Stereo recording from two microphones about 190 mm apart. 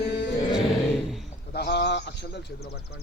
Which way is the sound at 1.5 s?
60° left (ahead or behind).